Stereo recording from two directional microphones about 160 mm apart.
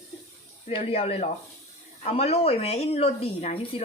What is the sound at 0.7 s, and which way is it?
Speech, 35° left (ahead or behind).